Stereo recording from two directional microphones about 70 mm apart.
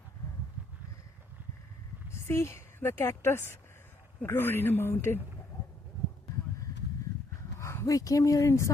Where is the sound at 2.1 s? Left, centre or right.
Left.